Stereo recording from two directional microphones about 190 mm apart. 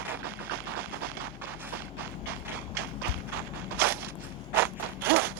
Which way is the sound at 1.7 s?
10° right (ahead or behind).